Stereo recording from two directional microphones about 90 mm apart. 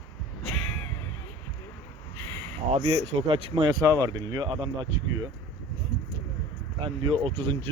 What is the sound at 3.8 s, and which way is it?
Speech, 45° right (ahead or behind).